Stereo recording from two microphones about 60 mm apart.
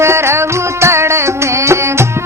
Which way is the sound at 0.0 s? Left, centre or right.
Right.